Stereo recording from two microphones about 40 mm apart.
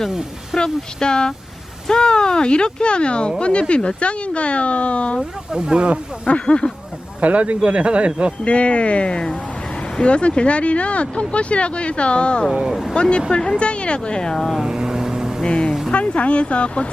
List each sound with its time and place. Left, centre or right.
0.6 s speech: centre
5.5 s speech: right
6.2 s speech: left
7.2 s speech: right
8.4 s speech: left
14.6 s vehicle: right
15.4 s speech: left